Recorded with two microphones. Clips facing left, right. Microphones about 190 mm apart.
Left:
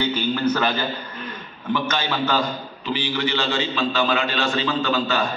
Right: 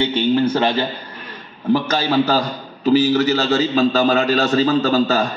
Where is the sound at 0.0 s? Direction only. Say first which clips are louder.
Right 5 dB; 25° right (ahead or behind).